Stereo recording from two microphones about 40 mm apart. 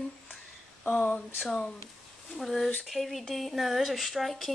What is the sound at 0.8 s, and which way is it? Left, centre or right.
Speech, left.